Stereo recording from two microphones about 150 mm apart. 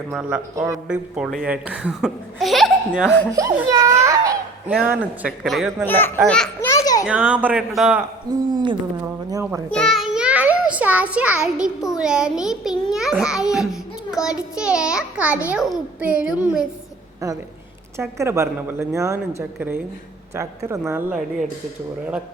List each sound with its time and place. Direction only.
0.1 s speech: 5° right (ahead or behind)
3.3 s speech: 20° right (ahead or behind)
4.0 s a sound: 20° right (ahead or behind)
4.7 s speech: 10° right (ahead or behind)
5.8 s speech: 15° left (ahead or behind)
6.7 s baby laughter: 25° left (ahead or behind)
7.0 s speech: 10° right (ahead or behind)
8.3 s a woman's voice: 30° right (ahead or behind)
9.3 s speech: 20° right (ahead or behind)
9.7 s a child's voice: centre (ahead or behind)
17.2 s speech: 20° right (ahead or behind)